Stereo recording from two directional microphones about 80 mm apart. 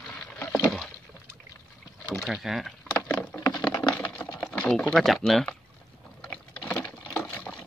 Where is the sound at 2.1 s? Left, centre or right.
Centre.